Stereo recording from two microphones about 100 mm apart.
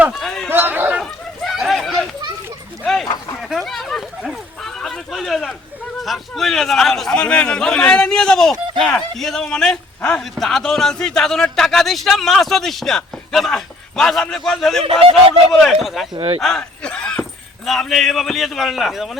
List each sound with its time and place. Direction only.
0.1 s a sound: 5° left (ahead or behind)
0.5 s bow-wow: 20° right (ahead or behind)
0.9 s dog: centre (ahead or behind)
2.8 s a sound: 5° left (ahead or behind)
6.0 s a man's voice: centre (ahead or behind)
16.1 s speech: 55° right (ahead or behind)
16.4 s a man's voice: 5° left (ahead or behind)